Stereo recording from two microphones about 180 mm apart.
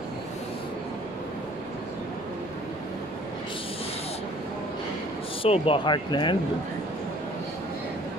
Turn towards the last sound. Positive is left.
turn(degrees=25)  # may be behind; listen again after turning